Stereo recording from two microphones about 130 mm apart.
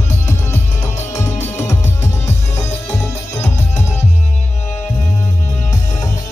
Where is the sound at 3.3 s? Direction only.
60° left (ahead or behind).